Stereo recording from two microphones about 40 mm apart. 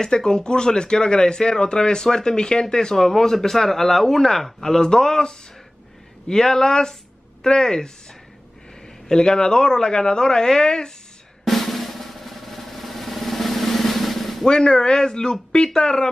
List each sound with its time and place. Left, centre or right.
0.0 s speech: centre
9.1 s speech: centre
11.4 s drum: centre
14.4 s speech: centre